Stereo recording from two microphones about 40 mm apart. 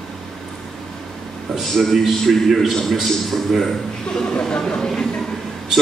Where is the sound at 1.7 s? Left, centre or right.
Centre.